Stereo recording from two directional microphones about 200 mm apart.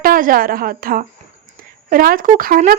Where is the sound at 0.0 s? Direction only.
45° right (ahead or behind).